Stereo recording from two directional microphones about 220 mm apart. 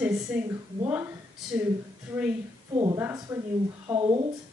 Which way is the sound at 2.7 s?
15° right (ahead or behind).